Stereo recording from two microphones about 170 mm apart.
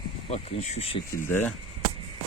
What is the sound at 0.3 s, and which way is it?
Speech, 40° left (ahead or behind).